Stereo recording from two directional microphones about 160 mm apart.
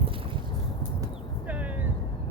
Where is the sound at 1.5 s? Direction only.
10° right (ahead or behind).